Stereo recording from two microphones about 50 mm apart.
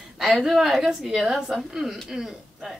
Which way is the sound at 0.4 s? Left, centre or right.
Centre.